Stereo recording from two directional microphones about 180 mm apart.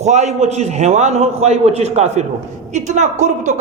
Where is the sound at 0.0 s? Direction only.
40° right (ahead or behind).